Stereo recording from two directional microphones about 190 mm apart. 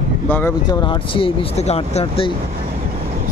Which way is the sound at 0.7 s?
25° left (ahead or behind).